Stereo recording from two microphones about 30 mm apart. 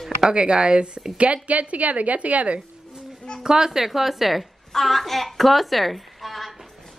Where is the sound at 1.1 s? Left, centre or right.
Right.